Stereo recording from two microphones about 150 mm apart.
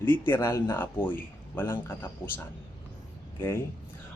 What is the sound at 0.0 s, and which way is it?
A man's voice, 15° left (ahead or behind).